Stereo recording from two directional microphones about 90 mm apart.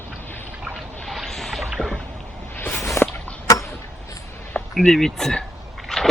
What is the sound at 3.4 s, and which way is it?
Tick-tock, 35° left (ahead or behind).